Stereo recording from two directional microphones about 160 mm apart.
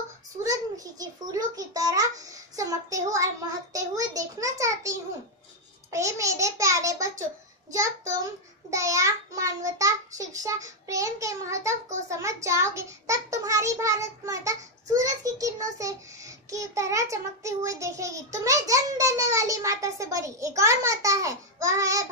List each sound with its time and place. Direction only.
0.4 s a child's voice: 20° right (ahead or behind)